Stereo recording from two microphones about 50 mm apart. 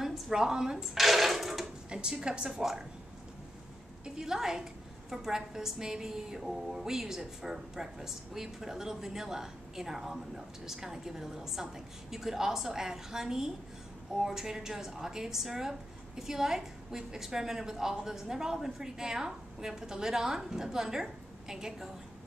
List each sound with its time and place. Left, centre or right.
0.0 s a woman's voice: centre
0.9 s a sound: centre
1.9 s a woman's voice: centre
4.0 s a woman's voice: centre